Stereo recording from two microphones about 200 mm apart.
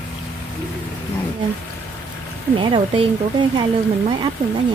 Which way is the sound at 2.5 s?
25° right (ahead or behind).